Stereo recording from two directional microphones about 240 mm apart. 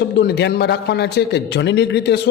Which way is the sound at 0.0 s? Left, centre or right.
Left.